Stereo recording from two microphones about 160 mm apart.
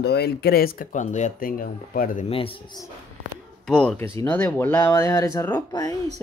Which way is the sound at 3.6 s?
5° left (ahead or behind).